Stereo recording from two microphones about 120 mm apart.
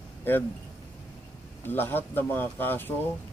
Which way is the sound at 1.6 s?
15° left (ahead or behind).